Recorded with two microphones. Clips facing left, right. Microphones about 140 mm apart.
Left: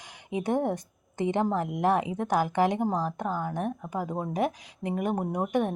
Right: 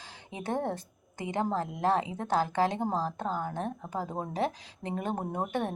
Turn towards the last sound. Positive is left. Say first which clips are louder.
# left 5 dB
turn(degrees=15)  # may be behind; listen again after turning